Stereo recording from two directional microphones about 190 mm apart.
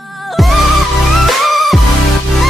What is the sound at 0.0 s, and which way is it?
Music, centre (ahead or behind).